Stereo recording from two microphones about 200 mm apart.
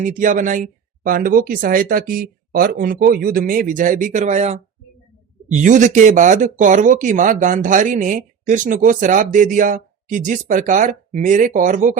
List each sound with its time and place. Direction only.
0.0 s speech: 40° right (ahead or behind)